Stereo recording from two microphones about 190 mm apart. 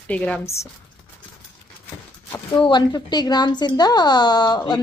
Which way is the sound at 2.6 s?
25° left (ahead or behind).